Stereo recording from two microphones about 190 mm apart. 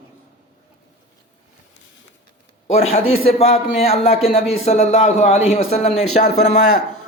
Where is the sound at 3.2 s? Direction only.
30° left (ahead or behind).